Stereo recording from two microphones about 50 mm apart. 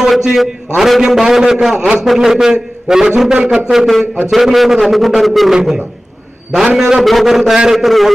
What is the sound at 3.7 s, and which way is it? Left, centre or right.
A man's voice, centre.